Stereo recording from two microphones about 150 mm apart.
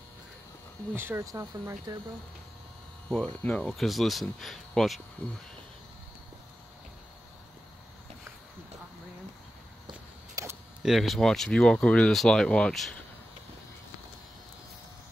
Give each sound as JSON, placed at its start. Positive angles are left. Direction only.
{"t": 0.9, "sound": "speech", "side_deg": -15}
{"t": 3.1, "sound": "speech", "side_deg": 5}
{"t": 10.3, "sound": "a sound", "side_deg": -15}
{"t": 10.8, "sound": "speech", "side_deg": 0}